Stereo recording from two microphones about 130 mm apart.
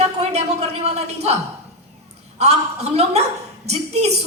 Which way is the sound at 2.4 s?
55° right (ahead or behind).